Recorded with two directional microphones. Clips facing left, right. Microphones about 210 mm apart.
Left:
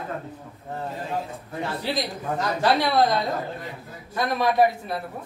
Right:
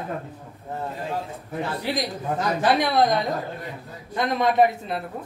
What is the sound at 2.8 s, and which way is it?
A man's voice, 20° right (ahead or behind).